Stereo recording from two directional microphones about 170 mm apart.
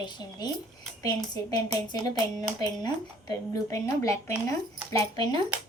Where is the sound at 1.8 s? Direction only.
25° left (ahead or behind).